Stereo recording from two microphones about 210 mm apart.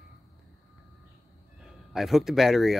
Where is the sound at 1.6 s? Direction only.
Centre (ahead or behind).